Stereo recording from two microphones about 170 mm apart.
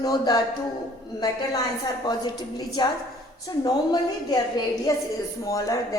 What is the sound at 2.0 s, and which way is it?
A woman's voice, 25° left (ahead or behind).